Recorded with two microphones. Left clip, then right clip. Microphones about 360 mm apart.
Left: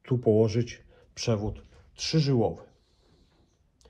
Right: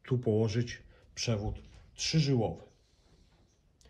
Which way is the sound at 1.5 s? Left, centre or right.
Centre.